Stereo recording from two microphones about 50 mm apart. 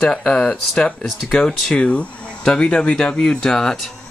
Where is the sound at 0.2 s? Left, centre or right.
Centre.